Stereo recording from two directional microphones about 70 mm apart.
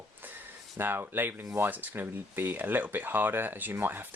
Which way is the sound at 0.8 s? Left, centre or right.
Right.